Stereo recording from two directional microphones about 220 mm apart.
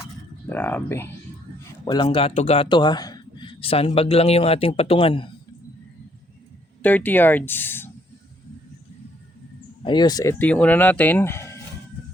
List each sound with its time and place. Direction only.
0.5 s speech: 10° left (ahead or behind)
1.8 s a man's voice: 20° left (ahead or behind)
6.8 s speech: 10° left (ahead or behind)
9.8 s speech: 20° left (ahead or behind)